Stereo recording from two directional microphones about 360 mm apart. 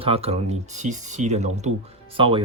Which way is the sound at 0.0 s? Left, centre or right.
Centre.